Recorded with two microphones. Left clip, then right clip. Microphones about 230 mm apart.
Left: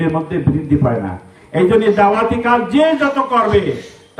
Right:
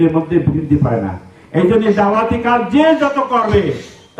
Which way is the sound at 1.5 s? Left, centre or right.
Left.